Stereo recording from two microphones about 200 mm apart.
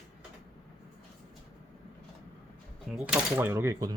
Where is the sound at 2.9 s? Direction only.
5° right (ahead or behind).